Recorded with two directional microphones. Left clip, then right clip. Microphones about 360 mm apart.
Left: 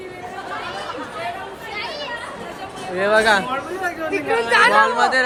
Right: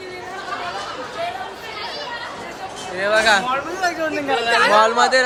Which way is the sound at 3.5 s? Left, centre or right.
Right.